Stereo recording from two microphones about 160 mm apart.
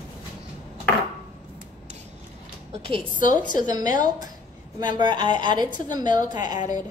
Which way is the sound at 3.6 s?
25° right (ahead or behind).